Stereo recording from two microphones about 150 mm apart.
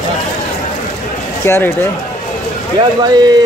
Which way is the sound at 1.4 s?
15° left (ahead or behind).